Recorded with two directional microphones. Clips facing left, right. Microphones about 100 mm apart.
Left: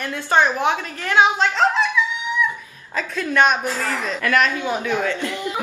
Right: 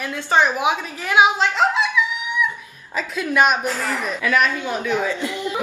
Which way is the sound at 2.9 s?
10° right (ahead or behind).